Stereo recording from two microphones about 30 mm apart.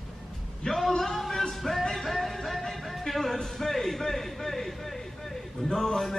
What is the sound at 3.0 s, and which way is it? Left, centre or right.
Music, centre.